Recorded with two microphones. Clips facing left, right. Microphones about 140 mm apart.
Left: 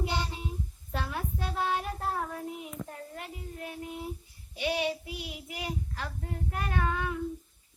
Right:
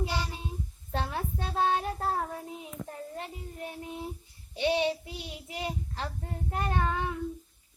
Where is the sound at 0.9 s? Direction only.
30° right (ahead or behind).